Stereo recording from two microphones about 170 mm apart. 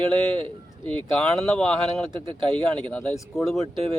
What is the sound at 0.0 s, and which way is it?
Speech, 30° right (ahead or behind).